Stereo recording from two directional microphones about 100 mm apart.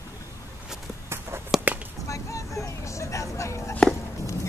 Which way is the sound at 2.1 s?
30° left (ahead or behind).